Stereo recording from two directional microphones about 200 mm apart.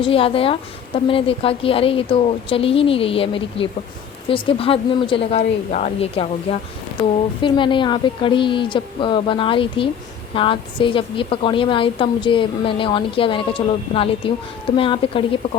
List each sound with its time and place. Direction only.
0.0 s a woman's voice: 25° left (ahead or behind)